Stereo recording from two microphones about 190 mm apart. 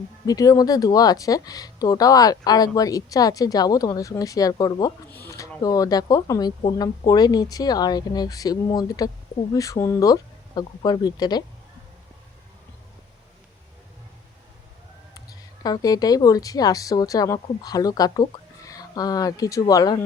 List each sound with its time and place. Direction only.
0.3 s speech: 20° left (ahead or behind)
15.6 s speech: 20° left (ahead or behind)